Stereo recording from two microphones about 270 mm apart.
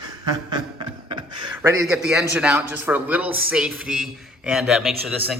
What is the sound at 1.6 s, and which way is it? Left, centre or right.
A man's voice, centre.